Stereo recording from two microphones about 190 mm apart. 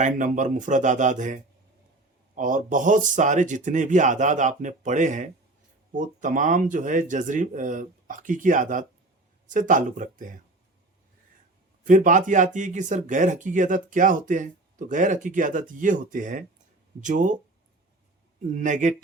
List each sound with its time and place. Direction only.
0.0 s speech: 40° right (ahead or behind)
11.9 s speech: 45° right (ahead or behind)
18.5 s speech: 40° right (ahead or behind)